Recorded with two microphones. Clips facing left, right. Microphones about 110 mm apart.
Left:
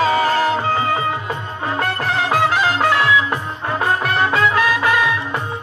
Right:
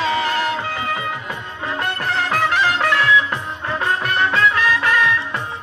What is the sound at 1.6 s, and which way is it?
Music of bollywood, 25° left (ahead or behind).